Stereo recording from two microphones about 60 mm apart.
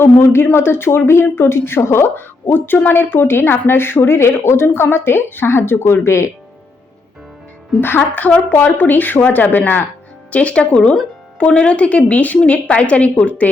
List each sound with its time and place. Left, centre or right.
0.0 s speech: left
7.8 s speech: left
10.3 s a woman's voice: left